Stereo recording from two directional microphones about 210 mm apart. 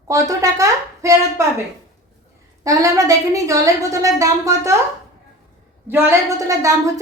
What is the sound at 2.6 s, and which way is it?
A woman's voice, 15° right (ahead or behind).